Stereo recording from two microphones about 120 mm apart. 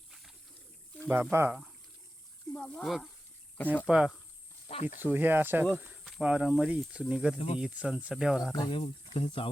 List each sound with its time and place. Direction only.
0.1 s a sound: centre (ahead or behind)
1.0 s speech: 15° right (ahead or behind)
2.5 s speech: 5° left (ahead or behind)
4.7 s speech: 70° left (ahead or behind)
4.9 s speech: 15° right (ahead or behind)
7.3 s speech: 55° left (ahead or behind)
7.6 s speech: 10° right (ahead or behind)
8.5 s speech: 40° left (ahead or behind)
8.8 s speech: 55° left (ahead or behind)